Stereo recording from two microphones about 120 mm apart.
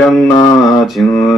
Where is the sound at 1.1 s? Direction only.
25° left (ahead or behind).